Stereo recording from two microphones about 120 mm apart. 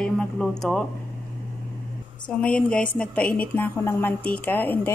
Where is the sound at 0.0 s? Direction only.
5° left (ahead or behind).